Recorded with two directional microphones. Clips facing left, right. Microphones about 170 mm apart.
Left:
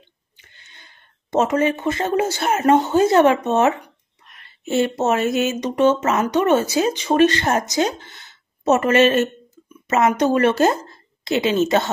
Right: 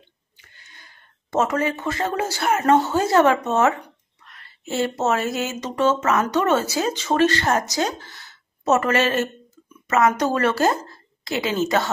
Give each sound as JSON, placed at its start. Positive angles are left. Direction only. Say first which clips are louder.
{"t": 0.4, "sound": "a woman's voice", "louder": "even", "side_deg": 25}